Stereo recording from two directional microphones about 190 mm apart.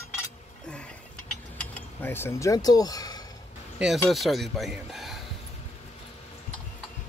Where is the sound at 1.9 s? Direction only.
10° left (ahead or behind).